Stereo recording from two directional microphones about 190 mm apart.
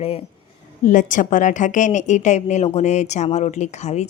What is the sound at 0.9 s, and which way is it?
A woman's voice, 40° left (ahead or behind).